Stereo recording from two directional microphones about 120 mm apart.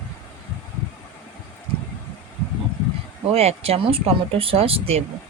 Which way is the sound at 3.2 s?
55° right (ahead or behind).